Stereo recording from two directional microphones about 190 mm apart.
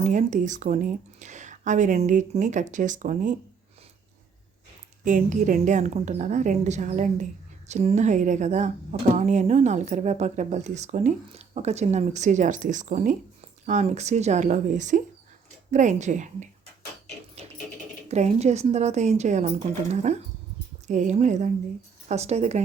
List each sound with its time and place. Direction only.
0.0 s speech: 40° right (ahead or behind)
5.0 s speech: 40° right (ahead or behind)
18.1 s speech: 35° right (ahead or behind)